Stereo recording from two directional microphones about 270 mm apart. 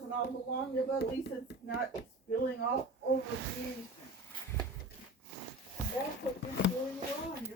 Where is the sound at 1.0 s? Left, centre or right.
Left.